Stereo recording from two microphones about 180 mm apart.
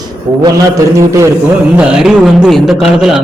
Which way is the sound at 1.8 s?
5° right (ahead or behind).